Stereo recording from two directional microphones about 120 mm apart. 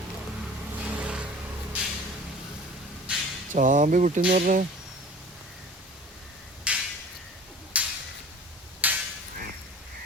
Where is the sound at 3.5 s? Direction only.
90° right.